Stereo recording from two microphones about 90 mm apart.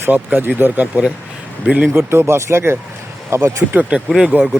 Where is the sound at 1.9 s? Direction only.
30° right (ahead or behind).